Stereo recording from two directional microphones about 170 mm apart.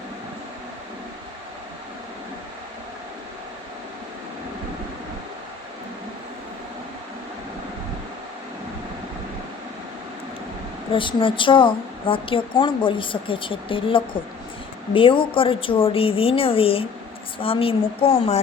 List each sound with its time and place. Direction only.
10.9 s a woman's voice: 30° left (ahead or behind)